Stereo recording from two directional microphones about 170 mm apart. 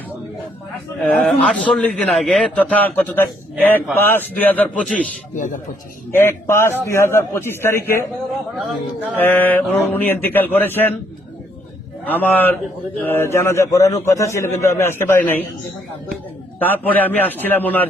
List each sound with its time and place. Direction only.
1.0 s a man's voice: 10° left (ahead or behind)
5.3 s a man's voice: 50° left (ahead or behind)
6.1 s a man's voice: 15° left (ahead or behind)
8.5 s speech: 5° right (ahead or behind)
9.1 s a man's voice: 10° left (ahead or behind)
12.0 s a man's voice: 10° left (ahead or behind)
16.6 s a man's voice: 10° left (ahead or behind)